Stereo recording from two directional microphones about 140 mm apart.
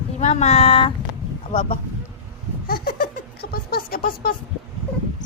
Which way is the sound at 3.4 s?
90° left.